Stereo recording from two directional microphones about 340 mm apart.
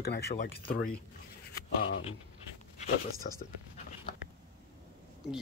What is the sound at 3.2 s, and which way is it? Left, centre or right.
Speech, left.